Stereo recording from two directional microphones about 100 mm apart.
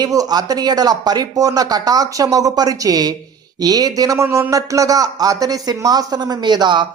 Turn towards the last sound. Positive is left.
turn(degrees=-50)  # may be behind; listen again after turning